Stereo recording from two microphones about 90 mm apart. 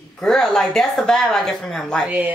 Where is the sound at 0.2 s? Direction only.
5° left (ahead or behind).